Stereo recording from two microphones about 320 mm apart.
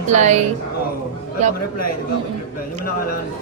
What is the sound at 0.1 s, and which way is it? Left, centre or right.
Speech, right.